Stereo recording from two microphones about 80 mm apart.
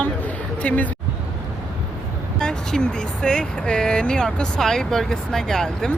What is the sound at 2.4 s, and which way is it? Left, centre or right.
Speech, centre.